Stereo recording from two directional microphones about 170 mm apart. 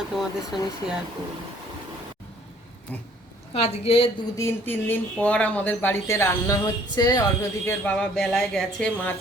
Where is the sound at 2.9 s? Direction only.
10° left (ahead or behind).